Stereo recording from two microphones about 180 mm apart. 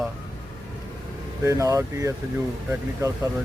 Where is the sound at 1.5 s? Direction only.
15° right (ahead or behind).